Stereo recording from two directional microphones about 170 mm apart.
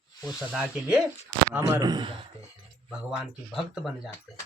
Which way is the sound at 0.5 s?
5° right (ahead or behind).